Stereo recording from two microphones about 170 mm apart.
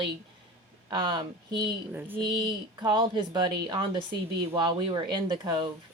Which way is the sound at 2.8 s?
25° right (ahead or behind).